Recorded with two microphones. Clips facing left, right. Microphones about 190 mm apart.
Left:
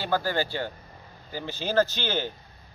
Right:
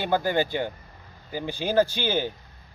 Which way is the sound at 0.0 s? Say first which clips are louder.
Right 3 dB; 20° right (ahead or behind).